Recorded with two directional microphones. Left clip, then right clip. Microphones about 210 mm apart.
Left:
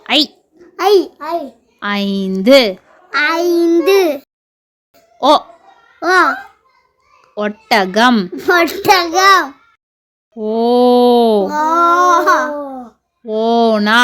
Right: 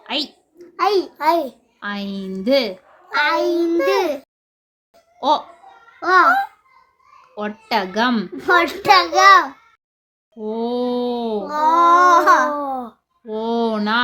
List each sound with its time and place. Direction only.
0.0 s a sound: 40° left (ahead or behind)
0.8 s a child's voice: 35° left (ahead or behind)
1.2 s a child's voice: 50° right (ahead or behind)
1.8 s a child's voice: 40° left (ahead or behind)
4.9 s music: 35° left (ahead or behind)
6.0 s a child's voice: 35° left (ahead or behind)
7.3 s a child's voice: 35° left (ahead or behind); by 12.5 s 10° left (ahead or behind)
13.2 s a child's voice: 35° left (ahead or behind)